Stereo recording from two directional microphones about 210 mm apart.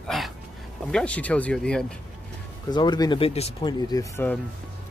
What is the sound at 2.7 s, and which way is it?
Speech, 20° left (ahead or behind).